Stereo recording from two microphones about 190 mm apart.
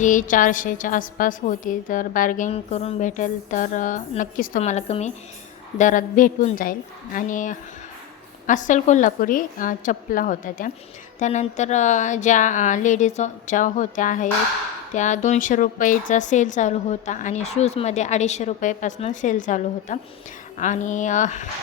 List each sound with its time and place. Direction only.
0.0 s a woman's voice: 45° left (ahead or behind)